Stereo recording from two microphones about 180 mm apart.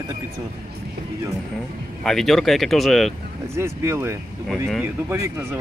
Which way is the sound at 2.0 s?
Centre (ahead or behind).